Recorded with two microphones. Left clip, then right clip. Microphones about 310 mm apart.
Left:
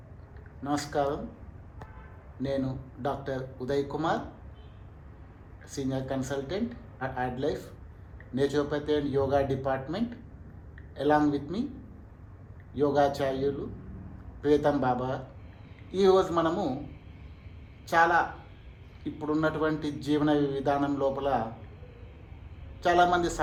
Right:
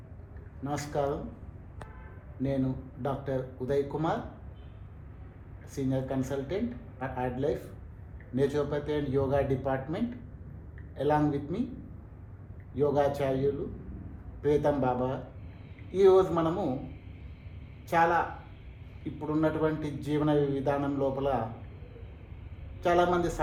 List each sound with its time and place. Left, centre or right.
0.6 s a man's voice: left
2.4 s a man's voice: left
5.7 s a man's voice: left
12.7 s a man's voice: left
17.8 s a man's voice: left
19.2 s a man's voice: left
22.8 s a man's voice: left